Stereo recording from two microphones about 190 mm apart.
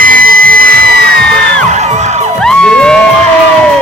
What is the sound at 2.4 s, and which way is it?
Music, 5° left (ahead or behind).